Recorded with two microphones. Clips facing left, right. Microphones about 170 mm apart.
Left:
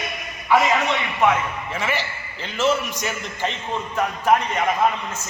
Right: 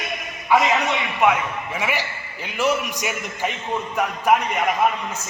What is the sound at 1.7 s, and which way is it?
A man's voice, 15° right (ahead or behind).